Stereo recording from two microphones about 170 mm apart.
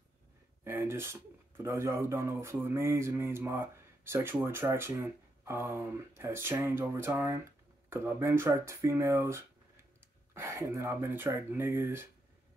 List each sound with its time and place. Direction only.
0.7 s speech: 15° right (ahead or behind)